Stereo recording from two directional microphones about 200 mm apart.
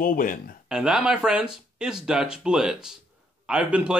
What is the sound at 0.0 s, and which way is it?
Speech, 45° left (ahead or behind).